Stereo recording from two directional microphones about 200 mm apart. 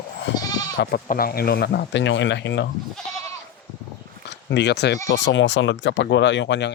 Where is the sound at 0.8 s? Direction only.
50° left (ahead or behind).